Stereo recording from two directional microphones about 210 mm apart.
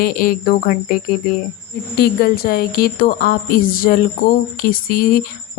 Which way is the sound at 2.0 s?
45° left (ahead or behind).